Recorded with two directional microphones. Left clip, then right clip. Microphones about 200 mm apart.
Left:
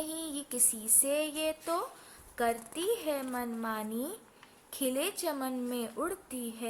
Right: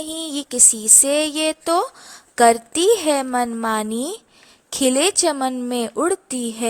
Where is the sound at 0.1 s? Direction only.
40° right (ahead or behind).